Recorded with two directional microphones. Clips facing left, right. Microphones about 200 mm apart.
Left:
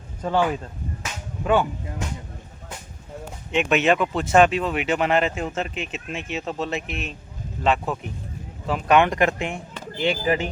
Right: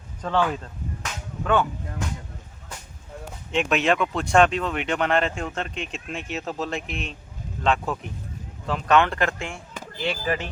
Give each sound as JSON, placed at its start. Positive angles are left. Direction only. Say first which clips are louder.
{"t": 0.2, "sound": "a man's voice", "louder": "left 2 dB", "side_deg": 10}
{"t": 3.5, "sound": "a man's voice", "louder": "left 2 dB", "side_deg": 0}